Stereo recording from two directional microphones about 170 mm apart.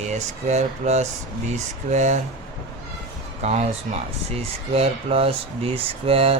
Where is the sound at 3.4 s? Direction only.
40° right (ahead or behind).